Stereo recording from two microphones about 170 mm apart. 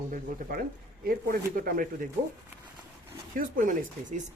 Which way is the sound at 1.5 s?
55° right (ahead or behind).